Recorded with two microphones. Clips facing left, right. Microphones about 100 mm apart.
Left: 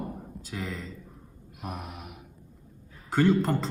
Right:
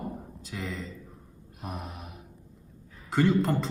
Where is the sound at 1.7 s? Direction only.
30° right (ahead or behind).